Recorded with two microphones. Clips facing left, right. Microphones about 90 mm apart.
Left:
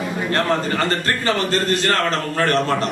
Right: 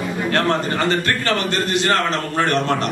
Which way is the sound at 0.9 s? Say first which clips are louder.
Right 1 dB; 35° left (ahead or behind).